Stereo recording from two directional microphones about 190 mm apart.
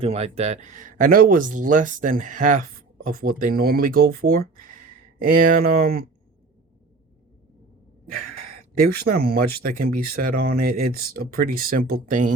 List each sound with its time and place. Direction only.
0.0 s speech: 30° right (ahead or behind); by 6.1 s 50° right (ahead or behind)
8.8 s speech: 55° right (ahead or behind)